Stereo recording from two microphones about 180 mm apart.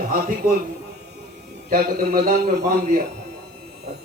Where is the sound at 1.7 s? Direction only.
55° right (ahead or behind).